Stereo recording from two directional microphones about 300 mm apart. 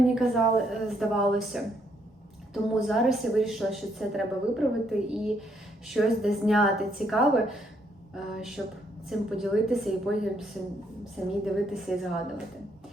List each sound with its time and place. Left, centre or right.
0.0 s a woman's voice: centre
11.4 s a woman's voice: centre